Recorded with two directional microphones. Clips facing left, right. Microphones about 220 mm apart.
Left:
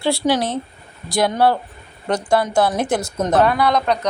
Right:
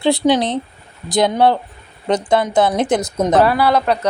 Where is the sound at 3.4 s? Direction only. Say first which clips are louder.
Right 2 dB; 5° right (ahead or behind).